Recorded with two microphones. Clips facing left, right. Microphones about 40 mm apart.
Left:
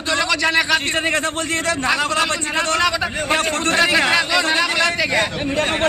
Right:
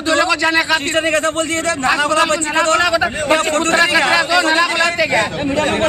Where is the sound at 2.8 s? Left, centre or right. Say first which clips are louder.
Right 4 dB; centre.